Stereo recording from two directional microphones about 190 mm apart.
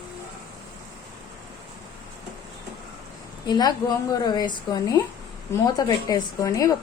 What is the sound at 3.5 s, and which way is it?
A woman's voice, 20° left (ahead or behind).